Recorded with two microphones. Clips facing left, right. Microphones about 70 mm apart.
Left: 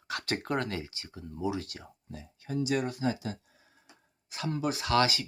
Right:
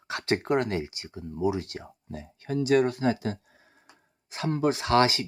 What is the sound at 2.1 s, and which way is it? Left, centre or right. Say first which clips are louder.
Speech: right 5 dB; right.